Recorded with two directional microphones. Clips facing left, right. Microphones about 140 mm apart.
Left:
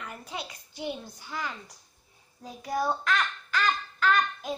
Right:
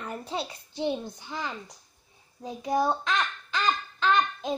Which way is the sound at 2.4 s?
20° right (ahead or behind).